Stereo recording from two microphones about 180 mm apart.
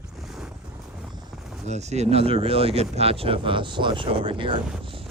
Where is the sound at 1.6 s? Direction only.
40° right (ahead or behind).